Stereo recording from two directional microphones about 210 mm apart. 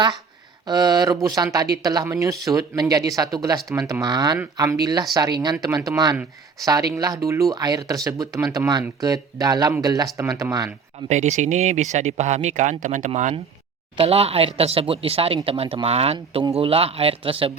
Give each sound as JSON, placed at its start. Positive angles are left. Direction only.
{"t": 0.7, "sound": "speech", "side_deg": -20}
{"t": 11.1, "sound": "speech", "side_deg": -35}